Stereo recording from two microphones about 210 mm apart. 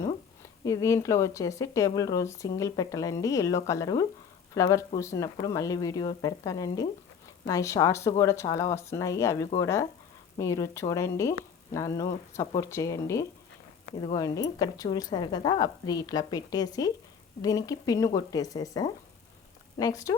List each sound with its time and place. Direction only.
0.6 s speech: 15° left (ahead or behind)